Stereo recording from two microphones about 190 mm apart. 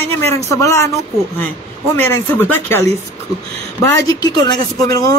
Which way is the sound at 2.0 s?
10° left (ahead or behind).